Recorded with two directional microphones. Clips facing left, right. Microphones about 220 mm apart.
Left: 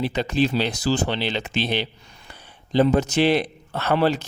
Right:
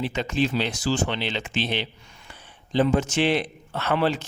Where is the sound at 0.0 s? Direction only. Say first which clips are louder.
Left 3 dB; 35° left (ahead or behind).